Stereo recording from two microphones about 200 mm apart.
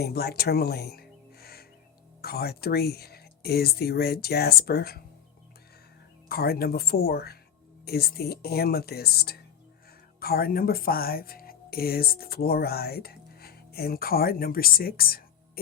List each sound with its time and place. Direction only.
0.0 s speech: 50° left (ahead or behind)
6.2 s speech: 50° left (ahead or behind)